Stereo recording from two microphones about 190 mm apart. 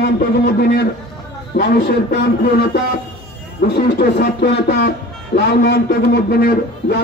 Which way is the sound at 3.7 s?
60° left (ahead or behind).